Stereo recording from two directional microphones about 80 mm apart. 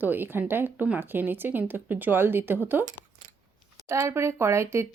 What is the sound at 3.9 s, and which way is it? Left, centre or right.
Speech, right.